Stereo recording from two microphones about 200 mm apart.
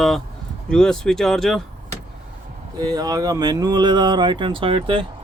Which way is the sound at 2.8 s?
20° right (ahead or behind).